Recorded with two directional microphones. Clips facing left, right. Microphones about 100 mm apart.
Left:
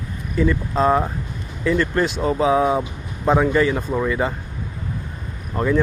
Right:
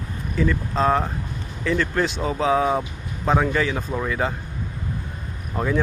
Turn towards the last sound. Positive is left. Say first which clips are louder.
# left 4 dB
turn(degrees=0)  # may be behind; listen again after turning